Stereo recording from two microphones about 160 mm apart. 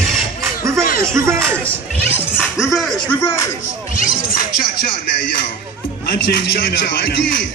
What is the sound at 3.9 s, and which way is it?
Music, 60° left (ahead or behind).